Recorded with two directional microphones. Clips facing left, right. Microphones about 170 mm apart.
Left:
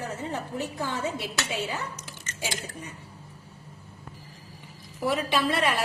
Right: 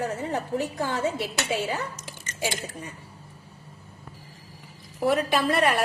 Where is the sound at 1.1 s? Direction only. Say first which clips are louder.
Right 4 dB; 50° right (ahead or behind).